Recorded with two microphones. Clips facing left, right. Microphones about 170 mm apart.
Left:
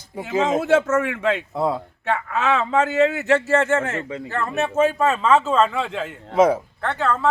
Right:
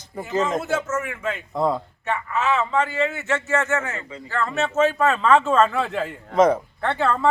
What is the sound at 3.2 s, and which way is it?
Speech, 35° left (ahead or behind).